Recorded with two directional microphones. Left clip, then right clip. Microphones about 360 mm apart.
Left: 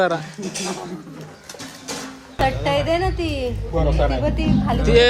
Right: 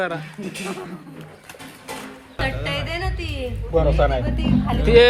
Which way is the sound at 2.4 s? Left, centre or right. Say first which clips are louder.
Left 6 dB; left.